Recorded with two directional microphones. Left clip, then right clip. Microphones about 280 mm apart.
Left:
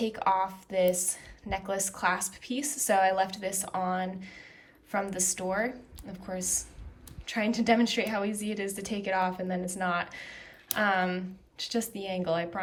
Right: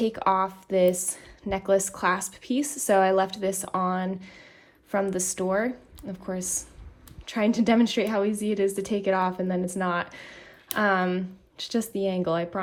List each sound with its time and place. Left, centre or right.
0.2 s speech: centre
7.3 s a woman's voice: centre